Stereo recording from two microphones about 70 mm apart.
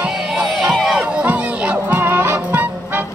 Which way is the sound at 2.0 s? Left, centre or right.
Right.